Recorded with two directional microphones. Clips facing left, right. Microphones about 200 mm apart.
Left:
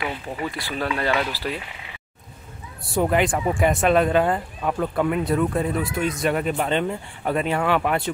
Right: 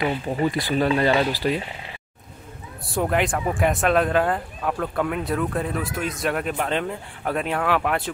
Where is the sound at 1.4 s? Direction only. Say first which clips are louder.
Right 5 dB; 5° right (ahead or behind).